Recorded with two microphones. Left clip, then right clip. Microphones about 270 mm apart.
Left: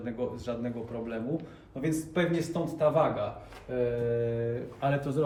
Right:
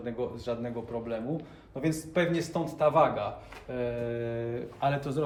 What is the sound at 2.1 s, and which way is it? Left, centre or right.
Speech, right.